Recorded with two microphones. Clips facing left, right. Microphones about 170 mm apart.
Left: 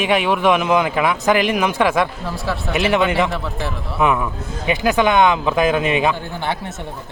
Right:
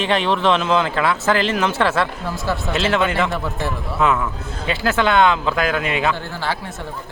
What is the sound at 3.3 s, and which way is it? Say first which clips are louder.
Speech: right 1 dB; centre (ahead or behind).